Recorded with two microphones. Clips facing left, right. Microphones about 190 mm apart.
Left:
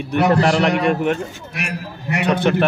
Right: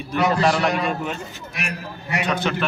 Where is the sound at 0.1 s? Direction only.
70° left (ahead or behind).